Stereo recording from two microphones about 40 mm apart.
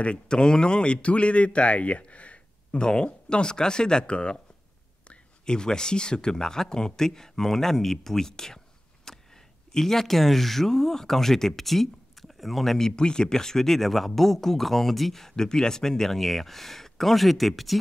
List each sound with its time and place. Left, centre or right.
0.0 s speech: left
2.8 s speech: left
5.5 s speech: centre
9.1 s a sound: centre
9.8 s speech: centre
12.7 s speech: centre